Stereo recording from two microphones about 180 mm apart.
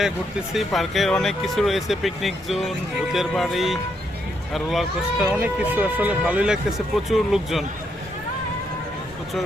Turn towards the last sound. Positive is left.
turn(degrees=0)  # may be behind; listen again after turning